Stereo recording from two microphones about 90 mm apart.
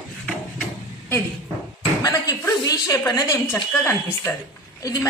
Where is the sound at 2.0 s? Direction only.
40° left (ahead or behind).